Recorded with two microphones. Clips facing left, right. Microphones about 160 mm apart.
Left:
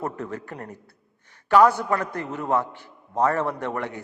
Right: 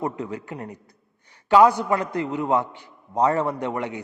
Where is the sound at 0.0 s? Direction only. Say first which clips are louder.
Right 2 dB; 15° right (ahead or behind).